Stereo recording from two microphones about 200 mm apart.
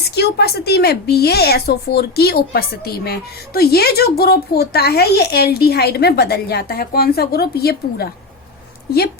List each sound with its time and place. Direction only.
0.0 s speech: 55° left (ahead or behind)